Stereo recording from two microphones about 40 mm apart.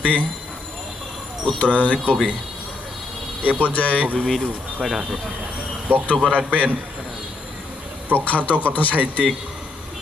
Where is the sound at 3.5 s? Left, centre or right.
Left.